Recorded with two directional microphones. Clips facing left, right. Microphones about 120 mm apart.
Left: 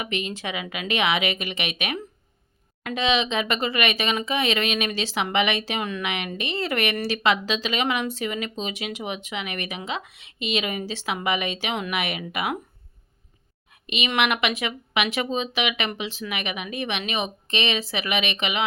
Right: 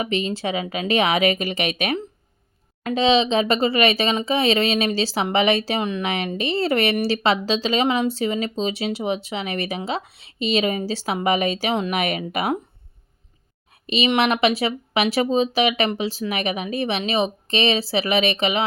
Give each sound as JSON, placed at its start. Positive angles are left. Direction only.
{"t": 0.0, "sound": "speech", "side_deg": -30}
{"t": 13.8, "sound": "speech", "side_deg": -35}